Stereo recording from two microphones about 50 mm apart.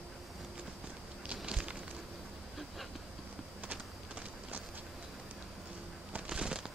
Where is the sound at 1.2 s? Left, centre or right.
Right.